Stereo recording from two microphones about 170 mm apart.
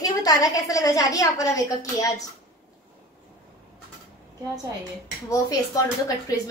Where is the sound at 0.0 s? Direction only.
20° left (ahead or behind).